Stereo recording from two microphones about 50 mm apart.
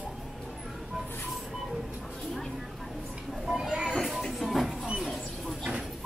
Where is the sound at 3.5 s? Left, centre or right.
Centre.